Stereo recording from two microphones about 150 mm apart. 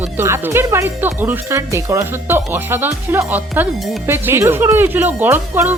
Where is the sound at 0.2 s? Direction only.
15° right (ahead or behind).